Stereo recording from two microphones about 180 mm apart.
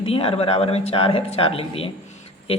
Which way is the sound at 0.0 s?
30° left (ahead or behind).